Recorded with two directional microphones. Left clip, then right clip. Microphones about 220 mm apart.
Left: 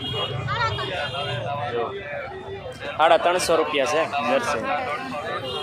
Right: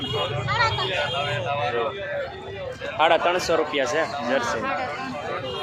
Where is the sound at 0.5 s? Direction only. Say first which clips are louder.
Right 3 dB; 20° right (ahead or behind).